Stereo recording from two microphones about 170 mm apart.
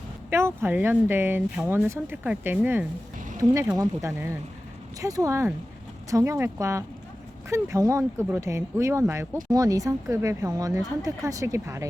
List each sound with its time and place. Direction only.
0.3 s speech: 15° right (ahead or behind)